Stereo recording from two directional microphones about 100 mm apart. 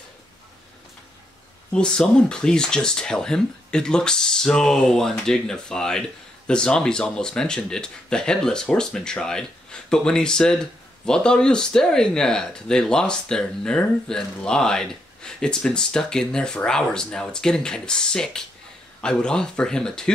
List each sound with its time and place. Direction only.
1.7 s speech: 10° left (ahead or behind)